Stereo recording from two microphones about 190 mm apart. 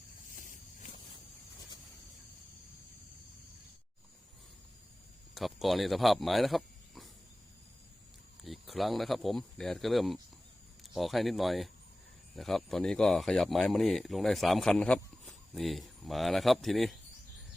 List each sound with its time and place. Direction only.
0.3 s a sound: 45° left (ahead or behind)
5.3 s speech: centre (ahead or behind)
8.4 s speech: centre (ahead or behind)